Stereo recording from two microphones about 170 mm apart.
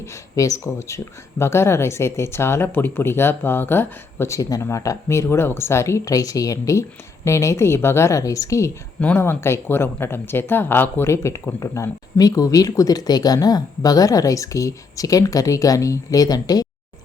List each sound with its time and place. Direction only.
0.0 s a woman's voice: 20° left (ahead or behind)